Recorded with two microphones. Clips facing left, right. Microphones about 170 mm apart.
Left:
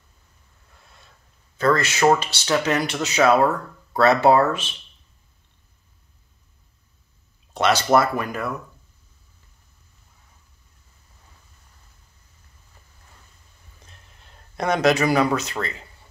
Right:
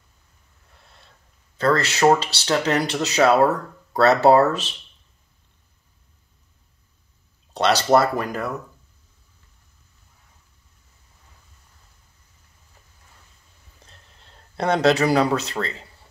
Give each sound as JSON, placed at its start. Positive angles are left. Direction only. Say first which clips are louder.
{"t": 1.6, "sound": "speech", "louder": "even", "side_deg": -35}
{"t": 7.5, "sound": "speech", "louder": "right 1 dB", "side_deg": -35}
{"t": 13.8, "sound": "speech", "louder": "even", "side_deg": -30}